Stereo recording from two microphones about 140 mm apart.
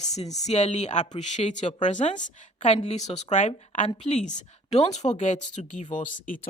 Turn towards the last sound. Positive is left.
turn(degrees=75)  # may be behind; listen again after turning